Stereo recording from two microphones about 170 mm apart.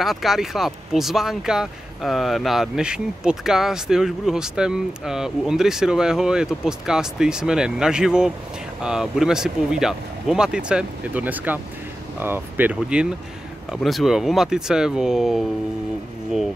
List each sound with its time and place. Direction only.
0.0 s speech: centre (ahead or behind)